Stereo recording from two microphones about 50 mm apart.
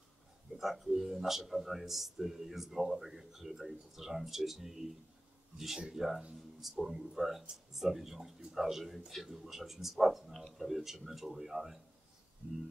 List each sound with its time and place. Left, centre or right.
0.6 s speech: centre
5.9 s speech: centre
12.4 s speech: right